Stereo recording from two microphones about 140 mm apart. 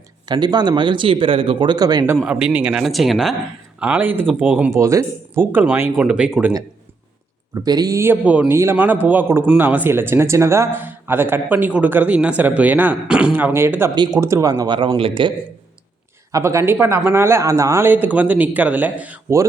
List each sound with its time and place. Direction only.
0.3 s speech: 30° right (ahead or behind)
2.0 s speech: 10° right (ahead or behind)
4.8 s speech: 20° right (ahead or behind)
7.5 s speech: 25° right (ahead or behind)
13.9 s speech: 30° right (ahead or behind)
14.2 s speech: 20° right (ahead or behind); by 15.3 s 40° right (ahead or behind)
16.3 s speech: 20° right (ahead or behind)